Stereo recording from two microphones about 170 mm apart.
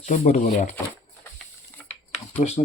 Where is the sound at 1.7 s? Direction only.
10° left (ahead or behind).